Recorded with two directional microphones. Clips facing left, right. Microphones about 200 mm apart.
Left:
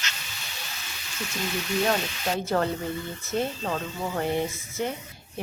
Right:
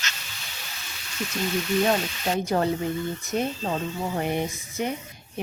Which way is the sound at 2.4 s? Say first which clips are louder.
Right 2 dB; 15° right (ahead or behind).